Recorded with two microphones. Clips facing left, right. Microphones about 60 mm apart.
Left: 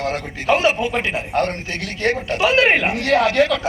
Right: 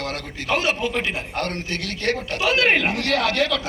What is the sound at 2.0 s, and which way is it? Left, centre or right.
A man's voice, left.